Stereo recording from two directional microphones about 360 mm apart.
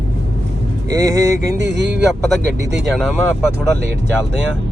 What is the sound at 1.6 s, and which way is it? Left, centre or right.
Speech, right.